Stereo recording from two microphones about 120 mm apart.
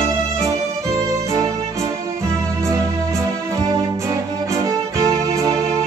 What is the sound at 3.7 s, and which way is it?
Music, 25° right (ahead or behind).